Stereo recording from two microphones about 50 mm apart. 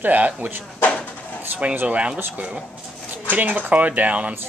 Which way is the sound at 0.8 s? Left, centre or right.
Left.